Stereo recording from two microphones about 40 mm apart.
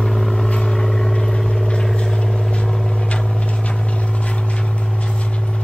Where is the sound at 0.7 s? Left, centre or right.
Centre.